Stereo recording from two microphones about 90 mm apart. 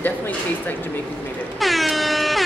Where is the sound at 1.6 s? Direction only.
Centre (ahead or behind).